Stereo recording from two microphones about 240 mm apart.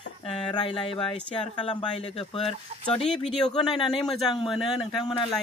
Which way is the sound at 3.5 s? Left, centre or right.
Centre.